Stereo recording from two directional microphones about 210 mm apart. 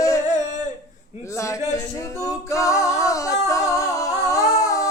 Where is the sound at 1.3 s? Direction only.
15° left (ahead or behind).